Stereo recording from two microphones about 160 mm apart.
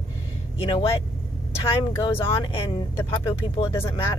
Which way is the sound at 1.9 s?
25° left (ahead or behind).